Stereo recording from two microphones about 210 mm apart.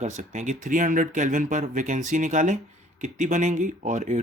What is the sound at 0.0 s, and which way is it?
Speech, 35° right (ahead or behind).